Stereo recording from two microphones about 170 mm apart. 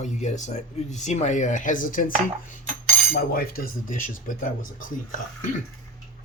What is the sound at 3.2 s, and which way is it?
Speech, 65° left (ahead or behind).